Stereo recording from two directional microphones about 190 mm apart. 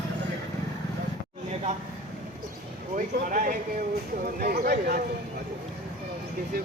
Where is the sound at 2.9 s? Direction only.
45° right (ahead or behind).